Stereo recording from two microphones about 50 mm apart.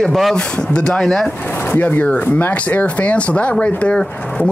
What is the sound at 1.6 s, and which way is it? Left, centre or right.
Speech, left.